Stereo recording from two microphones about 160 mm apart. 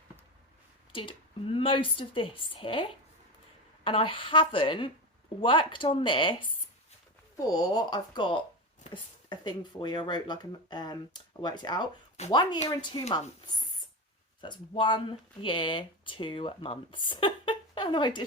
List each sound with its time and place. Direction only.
0.9 s speech: 35° left (ahead or behind)
3.8 s speech: 35° left (ahead or behind)
14.4 s speech: 30° left (ahead or behind)